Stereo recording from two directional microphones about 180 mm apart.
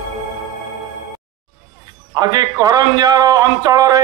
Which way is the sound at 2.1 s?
20° right (ahead or behind).